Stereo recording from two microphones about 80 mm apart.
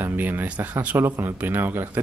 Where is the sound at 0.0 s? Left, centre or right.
Right.